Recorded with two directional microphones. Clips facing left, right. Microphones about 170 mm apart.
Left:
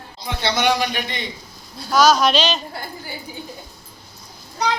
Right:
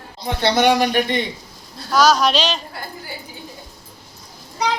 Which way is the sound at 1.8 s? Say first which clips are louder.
Even; 5° left (ahead or behind).